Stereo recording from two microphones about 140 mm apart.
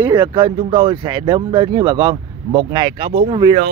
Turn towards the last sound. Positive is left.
turn(degrees=-35)  # may be behind; listen again after turning